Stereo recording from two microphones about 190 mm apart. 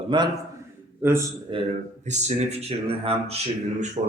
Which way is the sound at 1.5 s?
25° right (ahead or behind).